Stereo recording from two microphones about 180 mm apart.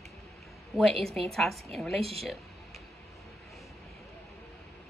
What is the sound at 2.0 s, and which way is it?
Speech, 35° right (ahead or behind).